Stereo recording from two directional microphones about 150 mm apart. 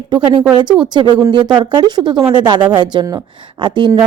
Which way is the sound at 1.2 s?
30° right (ahead or behind).